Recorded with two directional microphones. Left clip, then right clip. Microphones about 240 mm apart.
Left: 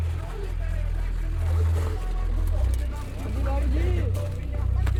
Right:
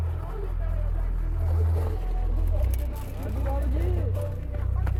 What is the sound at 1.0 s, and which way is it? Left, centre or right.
Vehicle, centre.